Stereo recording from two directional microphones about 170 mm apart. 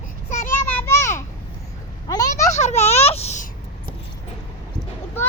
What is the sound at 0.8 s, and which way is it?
Children playing, 15° left (ahead or behind).